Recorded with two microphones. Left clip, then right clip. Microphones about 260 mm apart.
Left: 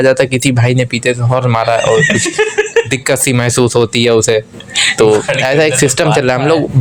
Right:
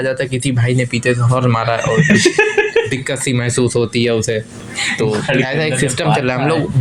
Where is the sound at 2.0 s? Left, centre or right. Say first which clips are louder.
Even; centre.